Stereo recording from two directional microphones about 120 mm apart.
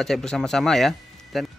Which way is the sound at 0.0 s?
5° left (ahead or behind).